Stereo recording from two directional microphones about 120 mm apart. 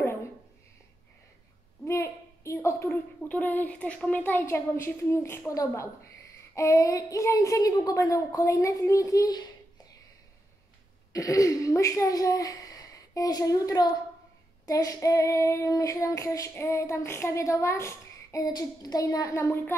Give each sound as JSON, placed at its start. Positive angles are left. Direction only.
{"t": 1.9, "sound": "a woman's voice", "side_deg": 25}
{"t": 6.5, "sound": "child singing", "side_deg": 25}
{"t": 11.1, "sound": "child singing", "side_deg": 30}